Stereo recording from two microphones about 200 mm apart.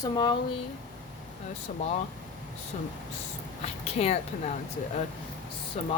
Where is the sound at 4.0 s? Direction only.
35° left (ahead or behind).